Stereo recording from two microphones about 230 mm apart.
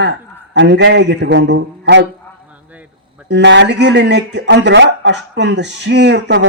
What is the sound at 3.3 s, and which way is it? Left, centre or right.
A man's voice, right.